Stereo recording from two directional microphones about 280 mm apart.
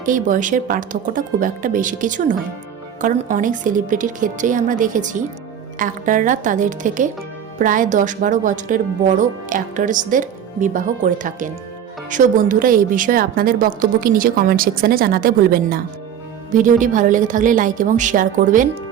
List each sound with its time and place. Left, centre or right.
0.0 s a woman's voice: right